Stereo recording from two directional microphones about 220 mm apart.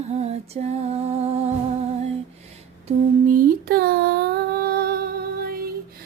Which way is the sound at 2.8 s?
35° right (ahead or behind).